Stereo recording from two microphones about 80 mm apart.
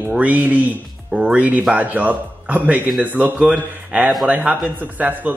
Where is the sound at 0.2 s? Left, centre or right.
Centre.